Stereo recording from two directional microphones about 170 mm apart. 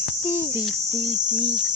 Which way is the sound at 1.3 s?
5° left (ahead or behind).